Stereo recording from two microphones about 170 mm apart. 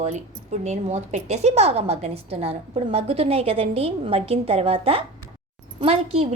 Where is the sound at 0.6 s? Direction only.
40° right (ahead or behind).